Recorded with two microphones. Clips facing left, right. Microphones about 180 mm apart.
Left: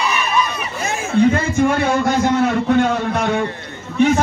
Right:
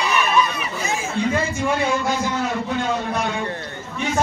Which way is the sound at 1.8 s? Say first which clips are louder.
Left 6 dB; 60° left (ahead or behind).